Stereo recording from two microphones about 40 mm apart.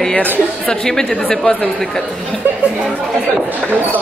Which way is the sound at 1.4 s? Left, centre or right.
Left.